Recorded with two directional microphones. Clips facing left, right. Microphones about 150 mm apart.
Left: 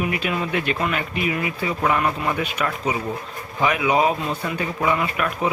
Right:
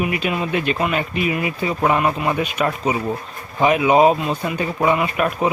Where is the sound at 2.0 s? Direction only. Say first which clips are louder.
Right 3 dB; 15° right (ahead or behind).